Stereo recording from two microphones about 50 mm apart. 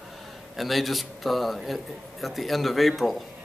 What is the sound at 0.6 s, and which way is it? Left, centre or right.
Speech, centre.